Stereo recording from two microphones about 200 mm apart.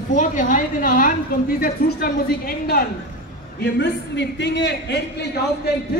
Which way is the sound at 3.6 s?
60° left (ahead or behind).